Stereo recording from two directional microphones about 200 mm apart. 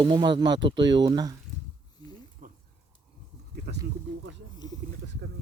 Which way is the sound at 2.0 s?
20° left (ahead or behind).